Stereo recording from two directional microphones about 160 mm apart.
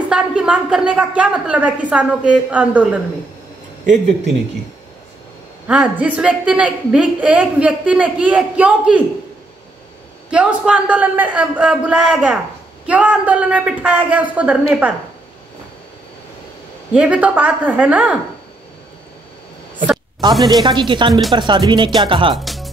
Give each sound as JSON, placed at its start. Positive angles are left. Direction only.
{"t": 0.1, "sound": "a woman's voice", "side_deg": -5}
{"t": 5.7, "sound": "a woman's voice", "side_deg": -10}
{"t": 10.3, "sound": "a woman's voice", "side_deg": -5}
{"t": 16.9, "sound": "a woman's voice", "side_deg": -10}
{"t": 20.2, "sound": "speech", "side_deg": -25}
{"t": 22.3, "sound": "speech", "side_deg": 0}